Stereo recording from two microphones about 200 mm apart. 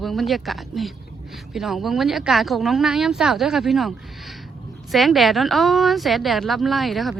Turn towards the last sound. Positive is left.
turn(degrees=0)  # may be behind; listen again after turning